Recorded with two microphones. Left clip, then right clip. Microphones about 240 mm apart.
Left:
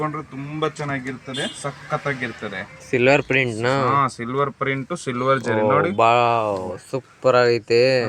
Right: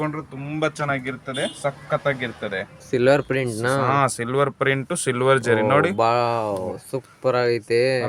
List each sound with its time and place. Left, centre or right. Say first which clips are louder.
0.6 s speech: right 1 dB; centre
2.9 s speech: left 2 dB; centre
3.8 s speech: left 1 dB; right
6.0 s speech: left 3 dB; centre